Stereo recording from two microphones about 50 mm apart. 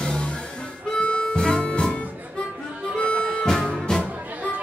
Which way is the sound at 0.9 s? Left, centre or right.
Centre.